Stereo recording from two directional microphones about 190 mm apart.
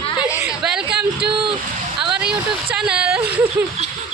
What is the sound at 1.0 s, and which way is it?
Speech, 60° right (ahead or behind).